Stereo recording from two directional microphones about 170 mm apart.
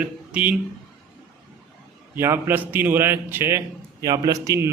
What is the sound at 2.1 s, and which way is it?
A man's voice, 15° right (ahead or behind).